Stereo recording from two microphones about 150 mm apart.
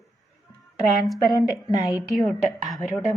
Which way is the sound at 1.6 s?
25° left (ahead or behind).